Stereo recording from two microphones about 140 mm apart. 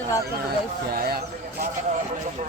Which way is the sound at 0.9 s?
90° right.